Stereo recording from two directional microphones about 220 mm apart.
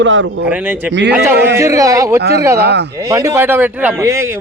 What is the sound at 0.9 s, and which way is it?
Speech, 55° right (ahead or behind).